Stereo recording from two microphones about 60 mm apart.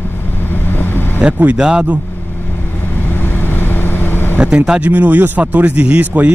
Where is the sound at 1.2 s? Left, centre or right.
Right.